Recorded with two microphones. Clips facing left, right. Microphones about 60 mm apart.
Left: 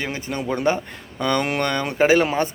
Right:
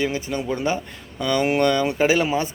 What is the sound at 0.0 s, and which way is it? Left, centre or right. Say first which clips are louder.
Speech: right 3 dB; left.